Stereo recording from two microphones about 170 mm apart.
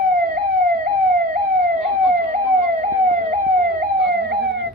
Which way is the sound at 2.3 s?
50° right (ahead or behind).